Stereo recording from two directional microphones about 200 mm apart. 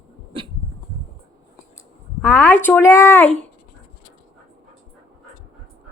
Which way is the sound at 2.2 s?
5° left (ahead or behind).